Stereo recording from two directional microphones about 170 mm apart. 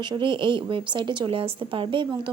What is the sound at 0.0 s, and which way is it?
Speech, 25° right (ahead or behind).